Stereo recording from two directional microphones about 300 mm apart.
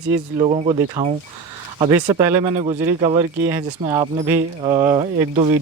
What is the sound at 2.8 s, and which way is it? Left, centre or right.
Speech, right.